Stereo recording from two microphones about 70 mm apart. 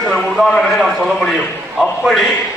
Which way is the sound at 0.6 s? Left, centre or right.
Centre.